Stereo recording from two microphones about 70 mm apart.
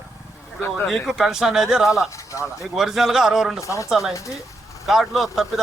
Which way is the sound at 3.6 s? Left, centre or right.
Left.